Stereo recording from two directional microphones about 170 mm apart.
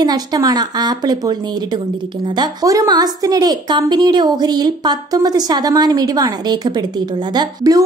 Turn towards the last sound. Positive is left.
turn(degrees=-20)  # may be behind; listen again after turning